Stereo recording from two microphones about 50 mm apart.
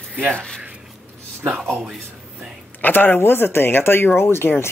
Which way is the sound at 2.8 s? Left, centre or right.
Left.